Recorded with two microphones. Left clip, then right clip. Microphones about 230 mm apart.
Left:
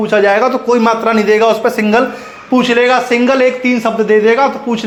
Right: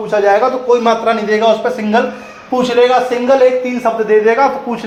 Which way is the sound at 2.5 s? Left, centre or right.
Left.